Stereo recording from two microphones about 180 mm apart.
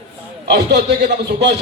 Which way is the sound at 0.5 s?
70° right (ahead or behind).